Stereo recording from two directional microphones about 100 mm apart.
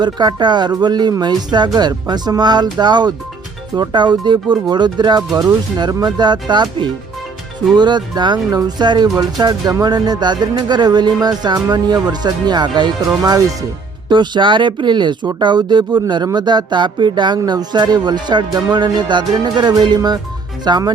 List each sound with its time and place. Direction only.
0.0 s speech: 45° right (ahead or behind)
13.2 s speech: 35° right (ahead or behind)
14.1 s speech: 50° right (ahead or behind)